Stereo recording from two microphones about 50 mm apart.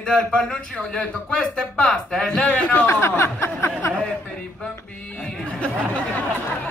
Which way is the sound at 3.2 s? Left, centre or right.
Left.